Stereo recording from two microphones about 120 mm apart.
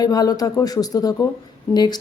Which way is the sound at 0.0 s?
30° left (ahead or behind).